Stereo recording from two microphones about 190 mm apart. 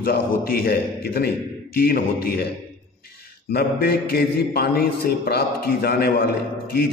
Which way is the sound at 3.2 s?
55° left (ahead or behind).